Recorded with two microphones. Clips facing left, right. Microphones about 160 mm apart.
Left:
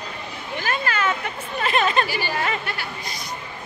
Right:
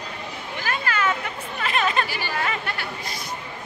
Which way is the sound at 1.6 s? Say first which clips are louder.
Left 3 dB; 25° left (ahead or behind).